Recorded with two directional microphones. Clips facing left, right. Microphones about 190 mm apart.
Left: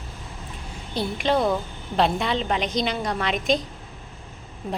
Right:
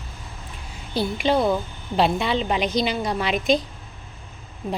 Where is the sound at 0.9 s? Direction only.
5° right (ahead or behind).